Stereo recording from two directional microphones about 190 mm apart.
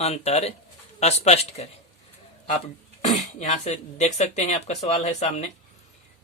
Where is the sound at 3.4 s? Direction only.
35° left (ahead or behind).